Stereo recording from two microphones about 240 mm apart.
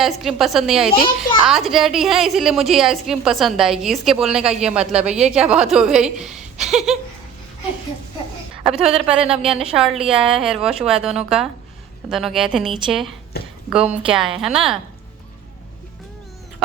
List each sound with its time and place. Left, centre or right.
0.0 s a woman's voice: centre
8.6 s a woman's voice: centre
13.3 s speech: left
13.7 s a woman's voice: centre